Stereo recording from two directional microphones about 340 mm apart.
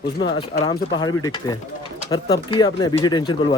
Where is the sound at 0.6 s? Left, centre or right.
Centre.